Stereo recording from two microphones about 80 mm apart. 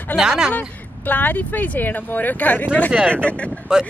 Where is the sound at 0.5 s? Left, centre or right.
Left.